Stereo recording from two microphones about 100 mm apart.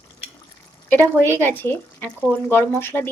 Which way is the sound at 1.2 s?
20° left (ahead or behind).